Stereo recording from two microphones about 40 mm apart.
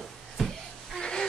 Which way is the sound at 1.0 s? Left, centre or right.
Left.